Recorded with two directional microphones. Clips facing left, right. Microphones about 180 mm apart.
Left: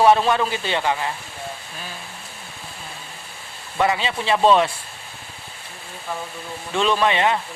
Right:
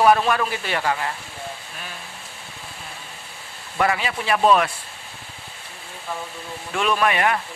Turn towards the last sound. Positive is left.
turn(degrees=25)  # may be behind; listen again after turning